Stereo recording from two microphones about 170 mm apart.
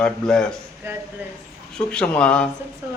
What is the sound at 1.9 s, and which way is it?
Speech, 5° left (ahead or behind).